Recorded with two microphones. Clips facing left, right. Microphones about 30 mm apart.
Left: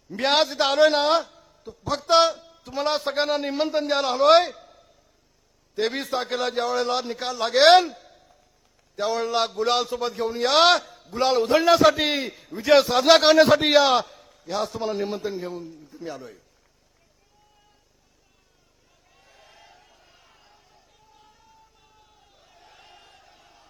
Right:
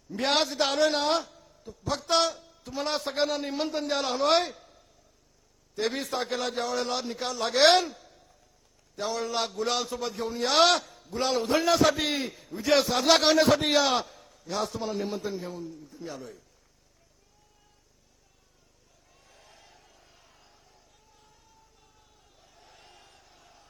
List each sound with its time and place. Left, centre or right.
0.1 s a man's voice: left
7.9 s a sound: left
9.0 s a man's voice: left
14.5 s a man's voice: centre
14.8 s a man's voice: left
19.1 s a sound: centre
21.8 s crowd: left